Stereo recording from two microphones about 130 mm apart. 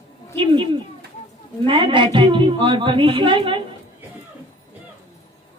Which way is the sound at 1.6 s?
40° right (ahead or behind).